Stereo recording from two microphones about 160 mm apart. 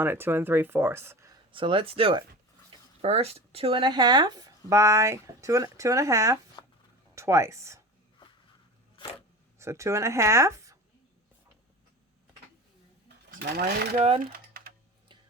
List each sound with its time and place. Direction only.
0.0 s speech: 15° right (ahead or behind)
1.5 s speech: 35° right (ahead or behind); by 7.8 s 20° right (ahead or behind)
9.6 s speech: 20° right (ahead or behind)
13.4 s speech: 80° right
14.2 s typing: 65° right (ahead or behind)